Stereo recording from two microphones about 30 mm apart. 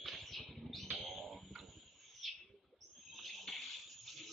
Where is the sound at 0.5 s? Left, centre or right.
Centre.